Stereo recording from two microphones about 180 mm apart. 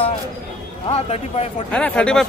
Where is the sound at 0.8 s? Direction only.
35° left (ahead or behind).